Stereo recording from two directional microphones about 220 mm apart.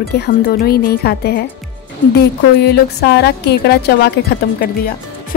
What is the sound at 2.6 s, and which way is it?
A woman's voice, 50° left (ahead or behind).